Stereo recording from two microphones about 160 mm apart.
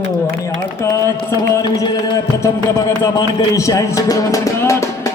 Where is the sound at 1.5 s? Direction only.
25° left (ahead or behind).